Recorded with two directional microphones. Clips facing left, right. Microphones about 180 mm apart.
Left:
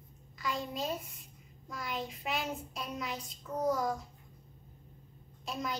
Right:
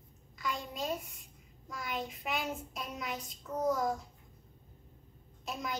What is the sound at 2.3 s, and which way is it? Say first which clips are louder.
A child's voice: right 1 dB; centre (ahead or behind).